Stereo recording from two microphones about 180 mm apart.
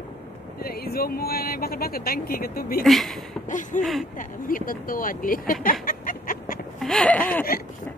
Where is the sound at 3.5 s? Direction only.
45° left (ahead or behind).